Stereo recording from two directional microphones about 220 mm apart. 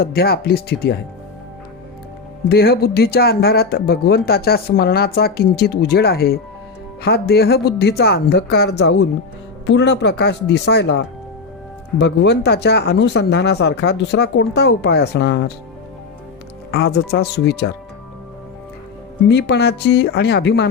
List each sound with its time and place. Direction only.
0.0 s speech: 45° left (ahead or behind)
2.5 s speech: 45° left (ahead or behind)
16.7 s speech: 50° left (ahead or behind)
19.3 s speech: 50° left (ahead or behind)